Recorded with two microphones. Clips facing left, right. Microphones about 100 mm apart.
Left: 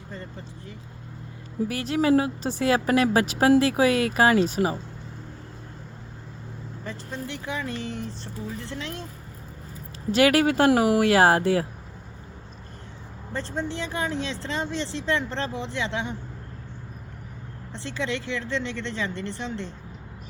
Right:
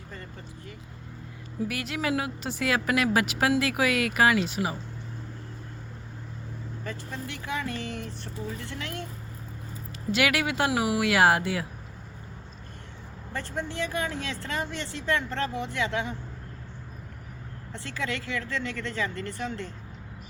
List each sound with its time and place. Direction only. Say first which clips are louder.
1.6 s a woman's voice: left 7 dB; 35° left (ahead or behind)
6.8 s speech: left 3 dB; 30° left (ahead or behind)
10.1 s a woman's voice: left 7 dB; 40° left (ahead or behind)
13.3 s speech: left 3 dB; 30° left (ahead or behind)
17.7 s speech: left 3 dB; 25° left (ahead or behind)